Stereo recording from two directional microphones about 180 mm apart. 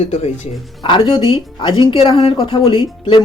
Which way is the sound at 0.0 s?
35° left (ahead or behind).